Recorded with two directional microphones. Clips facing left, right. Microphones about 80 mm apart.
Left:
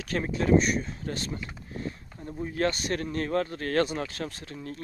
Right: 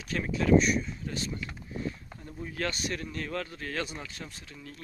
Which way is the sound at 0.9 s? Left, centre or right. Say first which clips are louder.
Left 2 dB; left.